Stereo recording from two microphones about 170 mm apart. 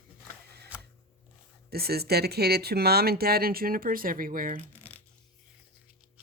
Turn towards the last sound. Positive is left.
turn(degrees=10)  # may be behind; listen again after turning